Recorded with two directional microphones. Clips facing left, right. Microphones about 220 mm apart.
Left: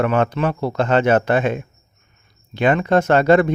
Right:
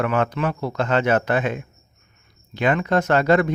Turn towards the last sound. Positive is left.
turn(degrees=25)  # may be behind; listen again after turning